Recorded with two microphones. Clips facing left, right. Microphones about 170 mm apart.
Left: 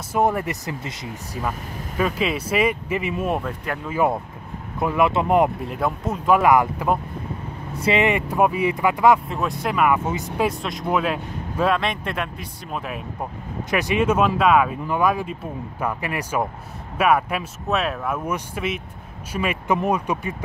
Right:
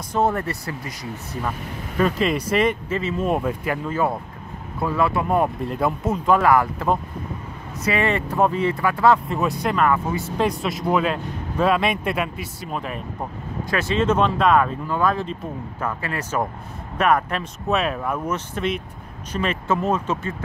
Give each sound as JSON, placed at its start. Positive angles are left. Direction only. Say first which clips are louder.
{"t": 0.1, "sound": "speech", "louder": "left 1 dB", "side_deg": 15}
{"t": 2.0, "sound": "speech", "louder": "right 2 dB", "side_deg": 5}
{"t": 3.3, "sound": "speech", "louder": "right 3 dB", "side_deg": -5}
{"t": 4.7, "sound": "speech", "louder": "left 2 dB", "side_deg": 20}
{"t": 5.7, "sound": "speech", "louder": "right 2 dB", "side_deg": 0}
{"t": 6.3, "sound": "speech", "louder": "left 2 dB", "side_deg": 15}
{"t": 9.3, "sound": "speech", "louder": "right 2 dB", "side_deg": 0}
{"t": 10.1, "sound": "speech", "louder": "right 1 dB", "side_deg": 15}
{"t": 10.4, "sound": "speech", "louder": "right 1 dB", "side_deg": 0}
{"t": 13.7, "sound": "speech", "louder": "even", "side_deg": 15}